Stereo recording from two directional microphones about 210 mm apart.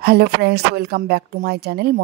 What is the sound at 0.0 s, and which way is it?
Speech, 50° right (ahead or behind).